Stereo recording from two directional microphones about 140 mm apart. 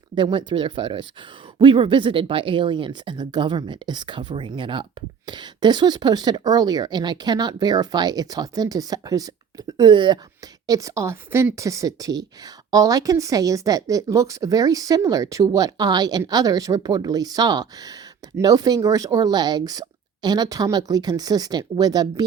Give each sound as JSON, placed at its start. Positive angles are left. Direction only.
{"t": 0.1, "sound": "speech", "side_deg": -35}
{"t": 10.7, "sound": "a woman's voice", "side_deg": -25}